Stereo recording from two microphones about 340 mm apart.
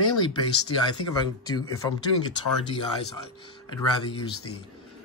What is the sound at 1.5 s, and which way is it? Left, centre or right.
Speech, centre.